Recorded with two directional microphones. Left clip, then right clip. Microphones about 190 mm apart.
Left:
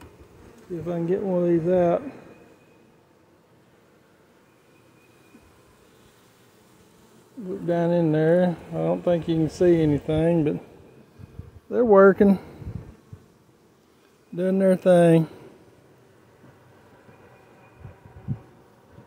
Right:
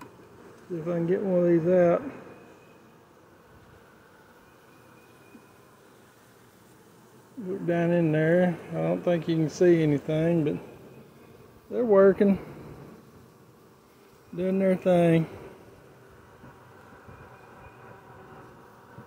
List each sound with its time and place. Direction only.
0.8 s speech: 20° left (ahead or behind)
7.6 s speech: 15° left (ahead or behind)
11.7 s speech: 45° left (ahead or behind)
14.3 s speech: 45° left (ahead or behind)